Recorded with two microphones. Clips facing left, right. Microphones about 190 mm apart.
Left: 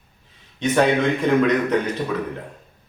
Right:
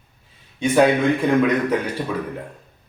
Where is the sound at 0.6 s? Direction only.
10° right (ahead or behind).